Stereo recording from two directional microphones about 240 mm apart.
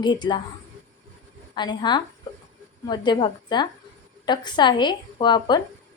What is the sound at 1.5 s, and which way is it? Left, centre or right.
A woman's voice, centre.